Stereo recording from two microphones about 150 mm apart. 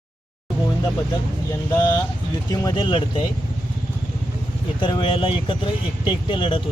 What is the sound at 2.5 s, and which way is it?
Speech, 30° left (ahead or behind).